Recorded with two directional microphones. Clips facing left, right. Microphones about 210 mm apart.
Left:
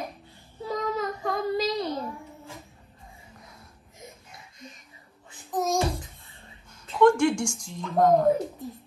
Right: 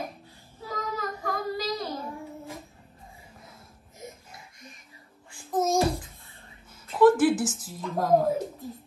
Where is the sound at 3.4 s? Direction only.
Centre (ahead or behind).